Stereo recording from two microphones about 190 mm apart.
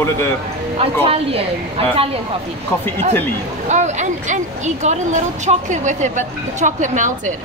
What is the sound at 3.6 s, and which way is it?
Speech, 40° right (ahead or behind).